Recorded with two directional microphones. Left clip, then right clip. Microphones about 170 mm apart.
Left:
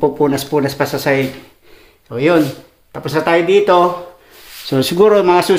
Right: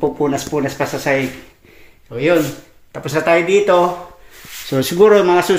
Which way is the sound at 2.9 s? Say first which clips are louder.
Even; centre (ahead or behind).